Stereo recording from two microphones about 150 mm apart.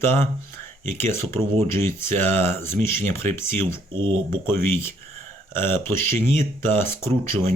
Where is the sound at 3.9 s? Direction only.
35° right (ahead or behind).